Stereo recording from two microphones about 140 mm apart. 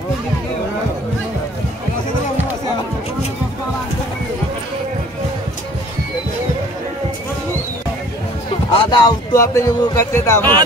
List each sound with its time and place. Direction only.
8.7 s a man's voice: 30° left (ahead or behind)